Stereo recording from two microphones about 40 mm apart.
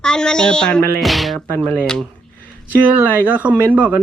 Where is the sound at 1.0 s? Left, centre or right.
Centre.